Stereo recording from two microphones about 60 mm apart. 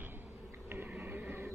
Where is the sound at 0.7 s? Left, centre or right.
Right.